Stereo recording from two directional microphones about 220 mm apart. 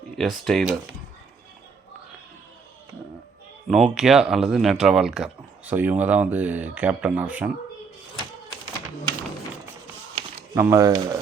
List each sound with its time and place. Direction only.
0.2 s speech: centre (ahead or behind)
3.7 s speech: centre (ahead or behind)
10.2 s speech: 15° right (ahead or behind)